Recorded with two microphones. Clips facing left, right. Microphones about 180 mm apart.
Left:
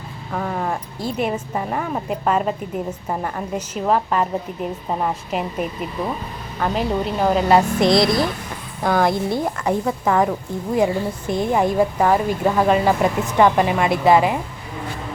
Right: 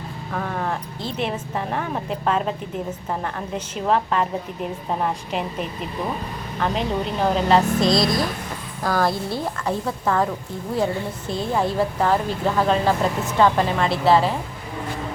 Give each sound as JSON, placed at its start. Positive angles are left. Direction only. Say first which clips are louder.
{"t": 0.3, "sound": "a woman's voice", "louder": "left 2 dB", "side_deg": 10}
{"t": 7.8, "sound": "a woman's voice", "louder": "left 3 dB", "side_deg": 25}